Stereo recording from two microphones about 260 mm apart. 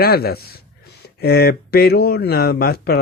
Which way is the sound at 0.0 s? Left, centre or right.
Left.